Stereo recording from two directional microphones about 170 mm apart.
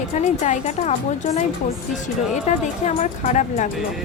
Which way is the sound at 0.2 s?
45° left (ahead or behind).